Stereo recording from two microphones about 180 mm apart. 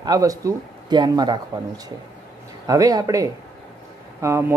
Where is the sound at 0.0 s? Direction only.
20° right (ahead or behind).